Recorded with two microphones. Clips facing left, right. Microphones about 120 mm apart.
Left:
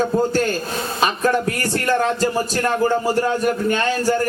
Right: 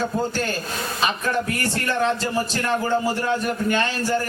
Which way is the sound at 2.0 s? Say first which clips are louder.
Left 3 dB; 45° left (ahead or behind).